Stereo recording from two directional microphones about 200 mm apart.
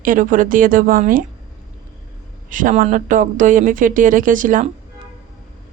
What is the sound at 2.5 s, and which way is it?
Speech, 40° right (ahead or behind).